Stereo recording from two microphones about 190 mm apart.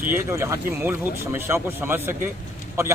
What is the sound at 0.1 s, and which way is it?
A man's voice, 15° right (ahead or behind).